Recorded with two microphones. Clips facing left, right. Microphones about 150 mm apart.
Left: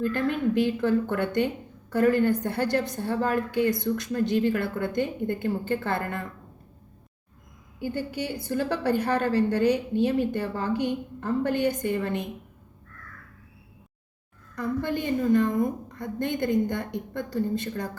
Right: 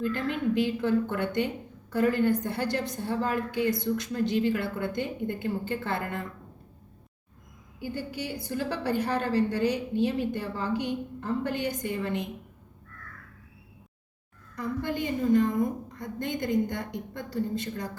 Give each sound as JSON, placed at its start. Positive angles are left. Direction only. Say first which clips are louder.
{"t": 0.0, "sound": "a woman's voice", "louder": "left 3 dB", "side_deg": 50}
{"t": 7.8, "sound": "a woman's voice", "louder": "left 4 dB", "side_deg": 55}
{"t": 14.5, "sound": "a woman's voice", "louder": "left 3 dB", "side_deg": 55}